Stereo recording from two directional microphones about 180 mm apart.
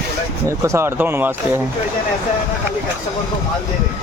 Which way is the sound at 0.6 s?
15° right (ahead or behind).